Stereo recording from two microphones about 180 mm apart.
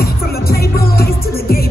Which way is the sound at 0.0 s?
60° left (ahead or behind).